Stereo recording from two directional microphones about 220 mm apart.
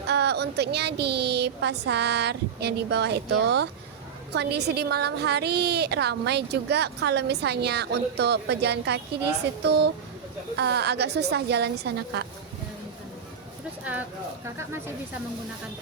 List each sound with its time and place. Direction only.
0.1 s a woman's voice: 50° right (ahead or behind)
13.9 s speech: 5° right (ahead or behind)